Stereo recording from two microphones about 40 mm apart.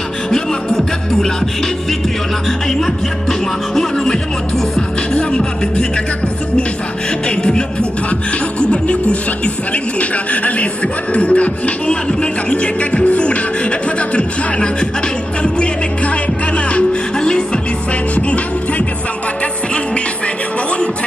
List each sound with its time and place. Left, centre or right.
0.3 s music: centre
5.1 s music: left
7.2 s music: left
8.5 s beatboxing: left
9.9 s beatboxing: left
12.2 s music: left
18.1 s music: left